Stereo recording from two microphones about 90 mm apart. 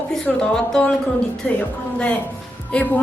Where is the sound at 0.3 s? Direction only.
10° left (ahead or behind).